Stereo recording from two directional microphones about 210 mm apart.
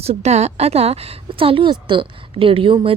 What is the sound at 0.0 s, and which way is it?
A woman's voice, 30° right (ahead or behind).